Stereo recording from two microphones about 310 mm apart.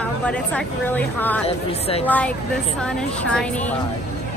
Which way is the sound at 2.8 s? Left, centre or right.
Centre.